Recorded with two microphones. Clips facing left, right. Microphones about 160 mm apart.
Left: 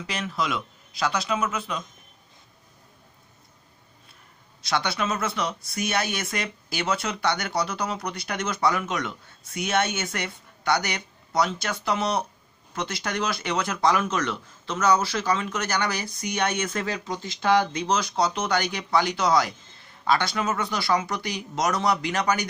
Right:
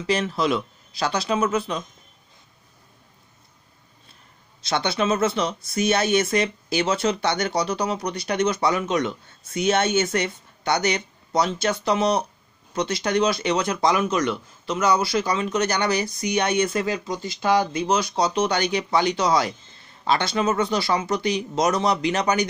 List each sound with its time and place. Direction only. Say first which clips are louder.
0.0 s speech: right 6 dB; 30° right (ahead or behind)
4.6 s speech: right 4 dB; 25° right (ahead or behind)
16.7 s speech: right 4 dB; 5° right (ahead or behind)